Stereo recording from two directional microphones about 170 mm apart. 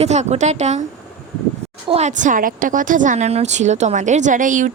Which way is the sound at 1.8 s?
40° right (ahead or behind).